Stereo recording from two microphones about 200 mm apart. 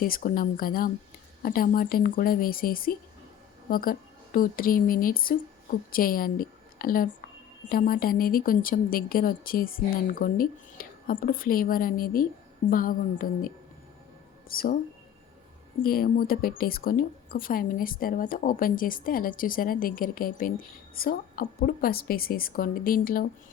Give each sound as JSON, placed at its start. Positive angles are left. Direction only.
{"t": 0.0, "sound": "a woman's voice", "side_deg": 45}
{"t": 14.5, "sound": "speech", "side_deg": 45}
{"t": 15.8, "sound": "speech", "side_deg": 50}